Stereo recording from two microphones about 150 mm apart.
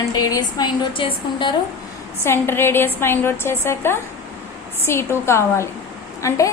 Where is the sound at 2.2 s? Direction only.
15° left (ahead or behind).